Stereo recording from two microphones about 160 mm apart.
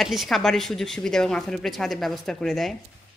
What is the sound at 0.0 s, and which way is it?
Speech, centre (ahead or behind).